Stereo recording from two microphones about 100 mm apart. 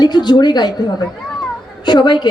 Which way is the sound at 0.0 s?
45° left (ahead or behind).